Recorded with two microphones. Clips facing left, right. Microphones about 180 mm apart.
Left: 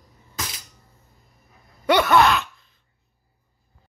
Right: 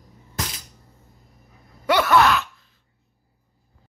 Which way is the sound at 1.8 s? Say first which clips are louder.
Left 1 dB; 5° right (ahead or behind).